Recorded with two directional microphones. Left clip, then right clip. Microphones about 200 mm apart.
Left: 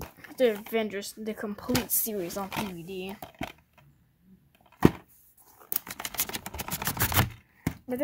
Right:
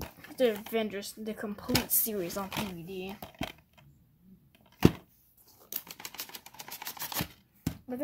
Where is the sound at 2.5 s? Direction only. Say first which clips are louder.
Left 3 dB; 20° left (ahead or behind).